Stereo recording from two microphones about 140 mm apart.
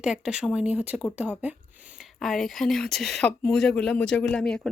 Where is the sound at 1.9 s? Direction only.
Centre (ahead or behind).